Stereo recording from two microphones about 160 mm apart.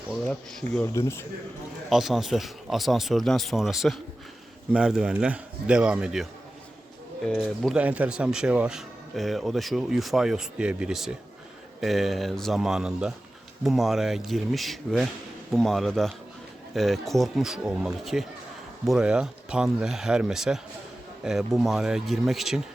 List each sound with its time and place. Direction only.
0.9 s a man's voice: 15° left (ahead or behind)
1.9 s speech: centre (ahead or behind)
7.3 s speech: centre (ahead or behind)